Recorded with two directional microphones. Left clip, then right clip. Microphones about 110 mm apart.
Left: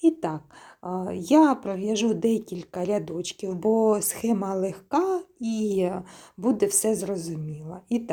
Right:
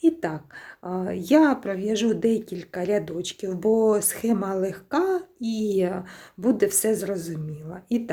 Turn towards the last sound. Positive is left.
turn(degrees=20)  # may be behind; listen again after turning